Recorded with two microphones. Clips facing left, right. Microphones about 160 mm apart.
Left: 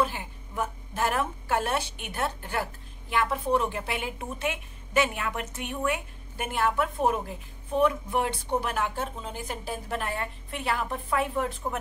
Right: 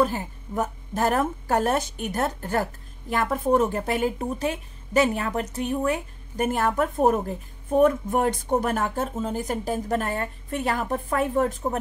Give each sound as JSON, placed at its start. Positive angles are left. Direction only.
{"t": 0.0, "sound": "speech", "side_deg": -40}